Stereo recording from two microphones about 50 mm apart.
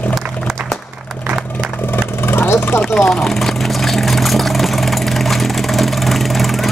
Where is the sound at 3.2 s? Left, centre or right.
Centre.